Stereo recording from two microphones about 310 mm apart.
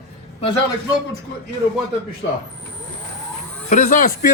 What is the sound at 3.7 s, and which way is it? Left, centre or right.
Speech, left.